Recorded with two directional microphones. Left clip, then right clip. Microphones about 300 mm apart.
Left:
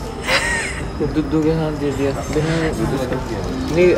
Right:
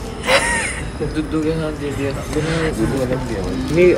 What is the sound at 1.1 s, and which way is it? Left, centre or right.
Speech, left.